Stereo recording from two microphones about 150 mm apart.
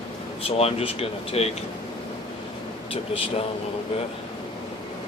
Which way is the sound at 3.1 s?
40° left (ahead or behind).